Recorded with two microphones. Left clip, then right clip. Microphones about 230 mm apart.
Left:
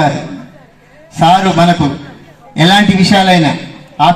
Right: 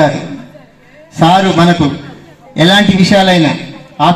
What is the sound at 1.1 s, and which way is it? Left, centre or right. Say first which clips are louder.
A man's voice: even; left.